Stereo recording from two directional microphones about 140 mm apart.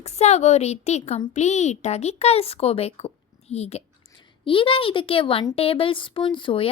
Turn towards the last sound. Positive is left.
turn(degrees=35)  # may be behind; listen again after turning